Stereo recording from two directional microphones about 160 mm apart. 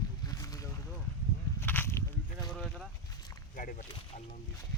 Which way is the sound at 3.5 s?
55° left (ahead or behind).